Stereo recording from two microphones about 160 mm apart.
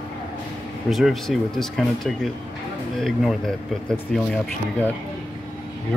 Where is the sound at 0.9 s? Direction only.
Centre (ahead or behind).